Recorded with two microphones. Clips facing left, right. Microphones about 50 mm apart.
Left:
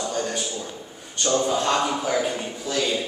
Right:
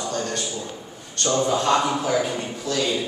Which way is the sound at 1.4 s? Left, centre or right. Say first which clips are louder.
Right 5 dB; centre.